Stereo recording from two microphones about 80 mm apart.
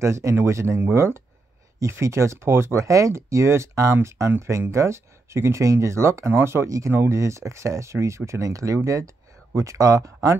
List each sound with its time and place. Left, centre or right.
0.0 s speech: right